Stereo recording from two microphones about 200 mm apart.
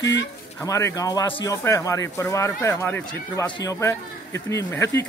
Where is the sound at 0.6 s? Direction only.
15° left (ahead or behind).